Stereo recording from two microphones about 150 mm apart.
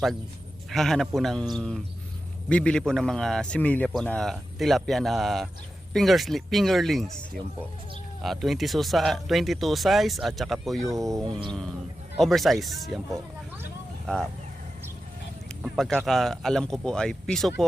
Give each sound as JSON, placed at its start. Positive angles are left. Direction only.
{"t": 0.7, "sound": "a man's voice", "side_deg": 0}
{"t": 8.2, "sound": "a man's voice", "side_deg": 0}
{"t": 10.8, "sound": "speech", "side_deg": -20}
{"t": 11.3, "sound": "a sound", "side_deg": -35}
{"t": 12.2, "sound": "a man's voice", "side_deg": 0}
{"t": 14.1, "sound": "a man's voice", "side_deg": 5}
{"t": 15.4, "sound": "a man's voice", "side_deg": 0}